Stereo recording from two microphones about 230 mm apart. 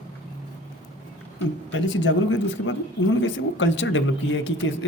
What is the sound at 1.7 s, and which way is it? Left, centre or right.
A man's voice, left.